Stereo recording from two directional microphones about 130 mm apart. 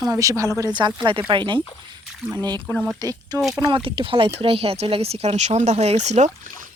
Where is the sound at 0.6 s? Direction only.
35° right (ahead or behind).